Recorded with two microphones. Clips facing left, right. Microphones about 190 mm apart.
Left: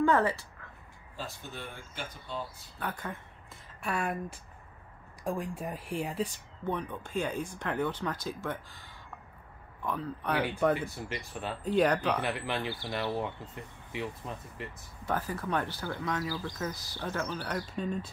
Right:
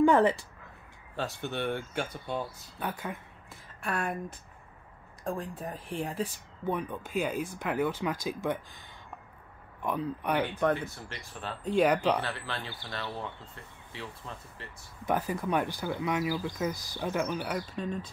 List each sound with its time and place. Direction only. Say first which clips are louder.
0.0 s speech: right 4 dB; 20° right (ahead or behind)
1.1 s speech: right 8 dB; 70° right (ahead or behind)
2.8 s speech: right 2 dB; 10° right (ahead or behind)
3.8 s speech: even; centre (ahead or behind)
5.4 s speech: left 1 dB; 10° left (ahead or behind); by 10.4 s 15° right (ahead or behind)
10.4 s speech: left 3 dB; centre (ahead or behind)
12.2 s speech: left 3 dB; 20° left (ahead or behind)
15.0 s speech: right 3 dB; 15° right (ahead or behind)
17.7 s speech: left 1 dB; 5° left (ahead or behind)